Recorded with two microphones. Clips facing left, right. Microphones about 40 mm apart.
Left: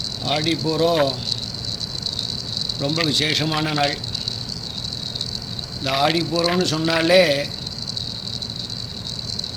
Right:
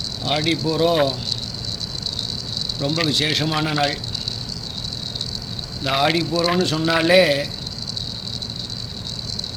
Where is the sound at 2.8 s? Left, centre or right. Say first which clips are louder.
Even; centre.